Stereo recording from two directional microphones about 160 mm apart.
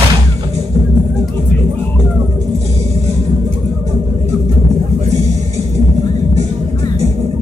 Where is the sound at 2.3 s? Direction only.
45° right (ahead or behind).